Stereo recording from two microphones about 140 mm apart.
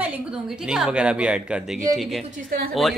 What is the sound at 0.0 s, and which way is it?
A woman's voice, 10° right (ahead or behind).